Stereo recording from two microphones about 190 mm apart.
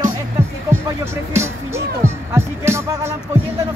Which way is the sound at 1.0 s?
15° right (ahead or behind).